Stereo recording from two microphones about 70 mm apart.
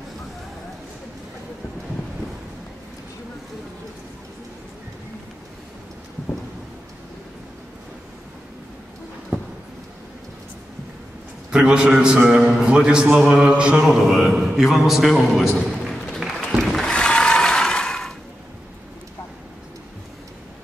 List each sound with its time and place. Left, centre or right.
11.5 s a man's voice: centre
13.8 s a man's voice: centre
15.7 s thump: centre
16.2 s applause: centre
16.9 s blender: centre